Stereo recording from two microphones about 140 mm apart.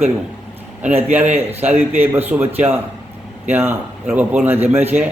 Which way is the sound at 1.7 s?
15° right (ahead or behind).